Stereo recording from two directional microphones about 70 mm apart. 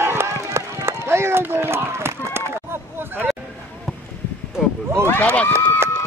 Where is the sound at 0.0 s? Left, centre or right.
Right.